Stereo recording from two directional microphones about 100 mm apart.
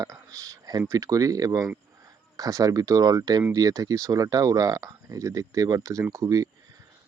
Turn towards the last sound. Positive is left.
turn(degrees=-35)  # may be behind; listen again after turning